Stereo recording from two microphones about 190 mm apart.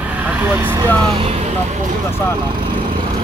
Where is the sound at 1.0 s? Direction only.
30° right (ahead or behind).